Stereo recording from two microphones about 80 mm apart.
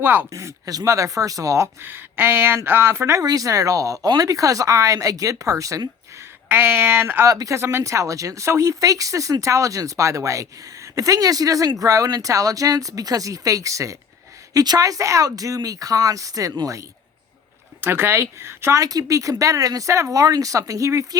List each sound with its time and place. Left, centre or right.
0.0 s speech: right
0.3 s speech: right
3.2 s speech: right
6.5 s speech: right
7.3 s speech: right
14.5 s speech: right
17.7 s speech: right
18.8 s speech: right